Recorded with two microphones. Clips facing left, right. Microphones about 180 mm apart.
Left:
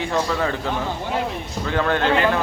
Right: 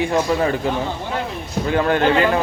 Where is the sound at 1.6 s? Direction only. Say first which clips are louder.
Right 3 dB; 15° right (ahead or behind).